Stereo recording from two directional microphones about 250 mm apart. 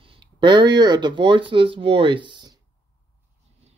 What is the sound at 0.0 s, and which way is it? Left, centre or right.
Speech, centre.